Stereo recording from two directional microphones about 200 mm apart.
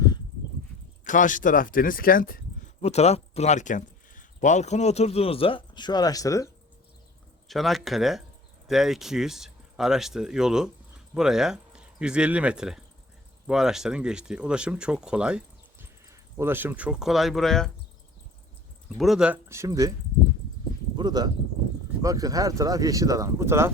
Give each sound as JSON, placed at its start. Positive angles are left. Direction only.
{"t": 1.0, "sound": "speech", "side_deg": 40}
{"t": 2.8, "sound": "speech", "side_deg": 35}
{"t": 7.4, "sound": "speech", "side_deg": 0}
{"t": 18.9, "sound": "speech", "side_deg": 0}
{"t": 20.9, "sound": "speech", "side_deg": -20}